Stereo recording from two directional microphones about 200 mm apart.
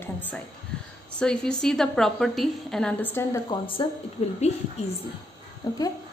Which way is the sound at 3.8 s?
25° left (ahead or behind).